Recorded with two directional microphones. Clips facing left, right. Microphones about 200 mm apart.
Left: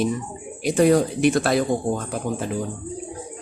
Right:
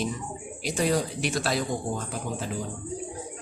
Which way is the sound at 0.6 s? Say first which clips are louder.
Left 9 dB; 55° left (ahead or behind).